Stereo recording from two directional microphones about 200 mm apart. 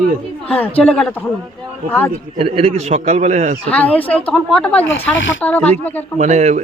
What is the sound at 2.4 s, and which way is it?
A man's voice, 30° right (ahead or behind).